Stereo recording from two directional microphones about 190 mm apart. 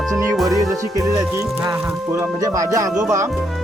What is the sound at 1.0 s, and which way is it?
Speech, 15° right (ahead or behind).